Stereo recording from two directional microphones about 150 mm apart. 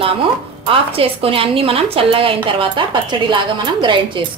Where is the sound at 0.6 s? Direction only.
40° right (ahead or behind).